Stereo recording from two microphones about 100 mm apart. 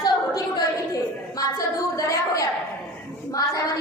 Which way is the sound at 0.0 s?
40° left (ahead or behind).